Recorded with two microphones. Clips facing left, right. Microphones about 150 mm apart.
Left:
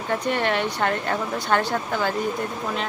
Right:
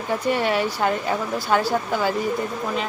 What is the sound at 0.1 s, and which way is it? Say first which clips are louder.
Speech: right 2 dB; 5° right (ahead or behind).